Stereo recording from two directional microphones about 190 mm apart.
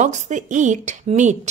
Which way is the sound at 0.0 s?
40° right (ahead or behind).